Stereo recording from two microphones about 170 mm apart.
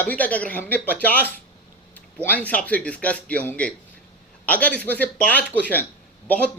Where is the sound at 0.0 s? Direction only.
10° left (ahead or behind).